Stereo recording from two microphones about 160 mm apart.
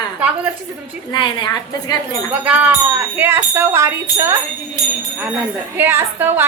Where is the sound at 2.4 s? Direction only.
10° right (ahead or behind).